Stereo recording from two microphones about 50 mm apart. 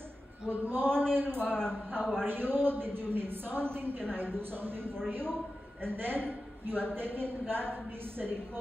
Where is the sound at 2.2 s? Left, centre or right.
Right.